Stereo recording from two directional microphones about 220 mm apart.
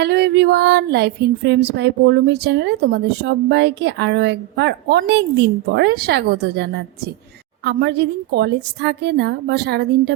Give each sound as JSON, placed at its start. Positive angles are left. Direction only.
{"t": 0.0, "sound": "female singing", "side_deg": -50}